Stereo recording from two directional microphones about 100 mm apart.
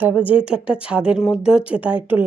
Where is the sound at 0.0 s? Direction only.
15° right (ahead or behind).